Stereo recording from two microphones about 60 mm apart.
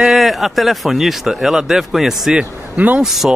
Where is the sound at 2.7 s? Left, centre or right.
Right.